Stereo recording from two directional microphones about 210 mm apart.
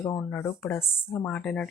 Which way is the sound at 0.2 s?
5° left (ahead or behind).